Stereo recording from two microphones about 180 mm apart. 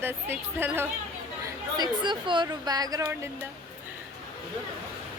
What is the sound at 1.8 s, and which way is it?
A woman's voice, 25° right (ahead or behind).